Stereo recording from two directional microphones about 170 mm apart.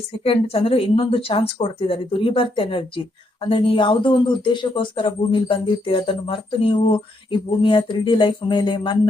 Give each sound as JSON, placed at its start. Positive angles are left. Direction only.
{"t": 0.3, "sound": "speech", "side_deg": 35}